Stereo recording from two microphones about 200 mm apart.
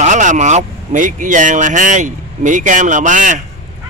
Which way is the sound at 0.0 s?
40° right (ahead or behind).